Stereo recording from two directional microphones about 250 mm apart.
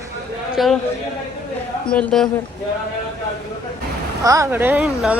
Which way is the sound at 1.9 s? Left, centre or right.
Centre.